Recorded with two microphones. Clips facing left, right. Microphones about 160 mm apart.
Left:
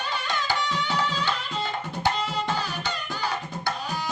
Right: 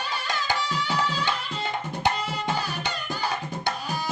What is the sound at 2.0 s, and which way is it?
Tabla, 20° right (ahead or behind).